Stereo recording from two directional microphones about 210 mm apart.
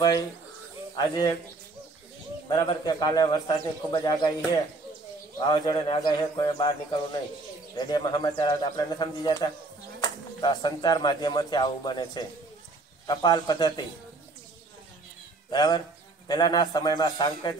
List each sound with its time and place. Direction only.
0.9 s speech: 20° left (ahead or behind)
2.4 s speech: 20° left (ahead or behind)
5.4 s speech: 20° left (ahead or behind)
15.5 s speech: 20° left (ahead or behind)